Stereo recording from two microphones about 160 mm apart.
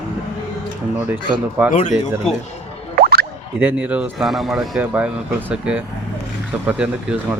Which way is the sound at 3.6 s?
10° right (ahead or behind).